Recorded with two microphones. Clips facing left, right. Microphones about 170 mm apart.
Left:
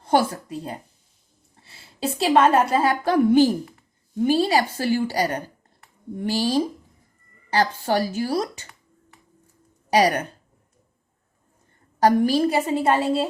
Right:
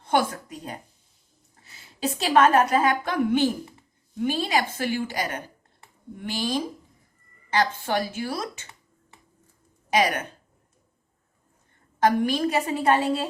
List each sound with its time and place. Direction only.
0.0 s a woman's voice: 35° left (ahead or behind)
9.9 s a woman's voice: 35° left (ahead or behind)
11.9 s a woman's voice: 35° left (ahead or behind)